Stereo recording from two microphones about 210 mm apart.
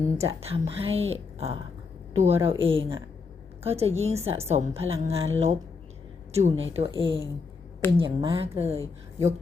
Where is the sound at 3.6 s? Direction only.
30° right (ahead or behind).